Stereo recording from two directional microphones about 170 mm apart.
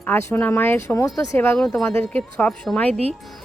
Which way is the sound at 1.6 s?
Centre (ahead or behind).